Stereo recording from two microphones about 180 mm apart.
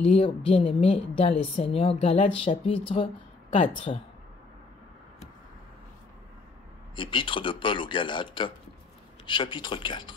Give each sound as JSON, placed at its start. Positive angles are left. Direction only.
{"t": 0.0, "sound": "speech", "side_deg": 35}
{"t": 7.0, "sound": "a man's voice", "side_deg": 25}